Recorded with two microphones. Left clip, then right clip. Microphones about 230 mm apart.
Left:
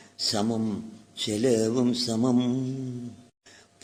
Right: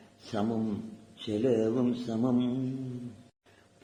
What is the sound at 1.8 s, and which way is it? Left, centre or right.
Mantra, left.